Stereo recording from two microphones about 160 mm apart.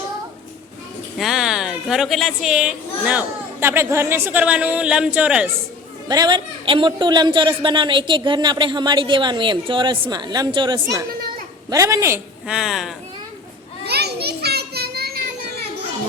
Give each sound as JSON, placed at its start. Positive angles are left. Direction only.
{"t": 1.2, "sound": "a woman's voice", "side_deg": 0}
{"t": 6.1, "sound": "a woman's voice", "side_deg": -25}
{"t": 12.5, "sound": "speech", "side_deg": 0}
{"t": 13.8, "sound": "children playing", "side_deg": -90}